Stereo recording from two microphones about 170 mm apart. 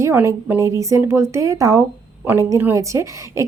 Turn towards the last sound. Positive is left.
turn(degrees=-15)  # may be behind; listen again after turning